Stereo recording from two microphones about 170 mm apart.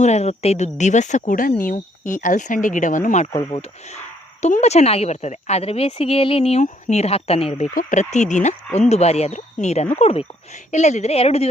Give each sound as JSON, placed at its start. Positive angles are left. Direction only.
{"t": 0.0, "sound": "speech", "side_deg": 40}
{"t": 3.3, "sound": "speech", "side_deg": 35}
{"t": 7.8, "sound": "speech", "side_deg": 45}